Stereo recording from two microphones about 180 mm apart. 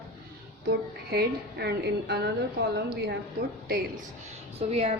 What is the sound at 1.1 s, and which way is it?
A woman's voice, 65° right (ahead or behind).